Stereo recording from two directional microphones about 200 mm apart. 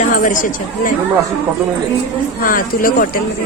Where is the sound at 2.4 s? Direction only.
45° left (ahead or behind).